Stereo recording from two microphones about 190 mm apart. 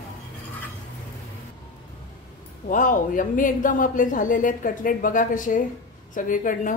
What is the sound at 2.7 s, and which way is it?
A woman's voice, 45° left (ahead or behind).